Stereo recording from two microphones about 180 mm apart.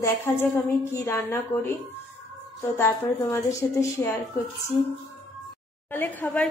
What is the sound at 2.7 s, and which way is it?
Speech, 15° left (ahead or behind).